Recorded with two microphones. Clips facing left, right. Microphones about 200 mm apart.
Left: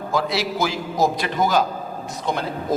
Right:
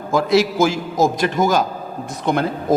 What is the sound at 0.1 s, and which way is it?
A man's voice, 50° right (ahead or behind).